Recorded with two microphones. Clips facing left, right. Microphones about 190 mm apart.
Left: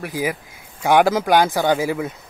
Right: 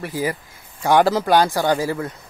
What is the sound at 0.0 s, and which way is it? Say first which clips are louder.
Speech: even; 15° left (ahead or behind).